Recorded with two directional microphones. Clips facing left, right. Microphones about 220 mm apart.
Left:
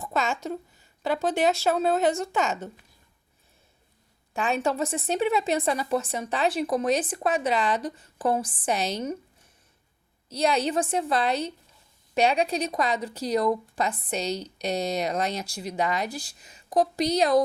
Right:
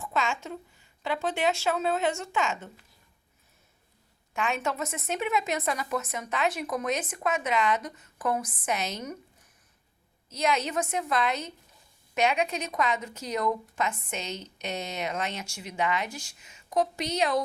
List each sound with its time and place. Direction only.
0.0 s speech: 40° left (ahead or behind)
4.4 s speech: 35° left (ahead or behind)
10.2 s speech: 35° left (ahead or behind)